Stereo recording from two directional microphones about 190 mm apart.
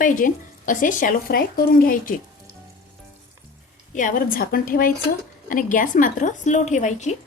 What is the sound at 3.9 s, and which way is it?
A woman's voice, 45° left (ahead or behind).